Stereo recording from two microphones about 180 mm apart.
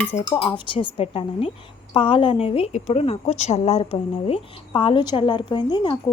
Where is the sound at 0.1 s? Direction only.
35° left (ahead or behind).